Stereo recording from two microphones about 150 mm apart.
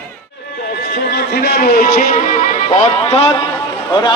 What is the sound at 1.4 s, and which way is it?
Speech, 90° left.